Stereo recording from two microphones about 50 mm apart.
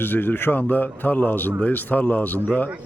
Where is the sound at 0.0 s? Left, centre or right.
Left.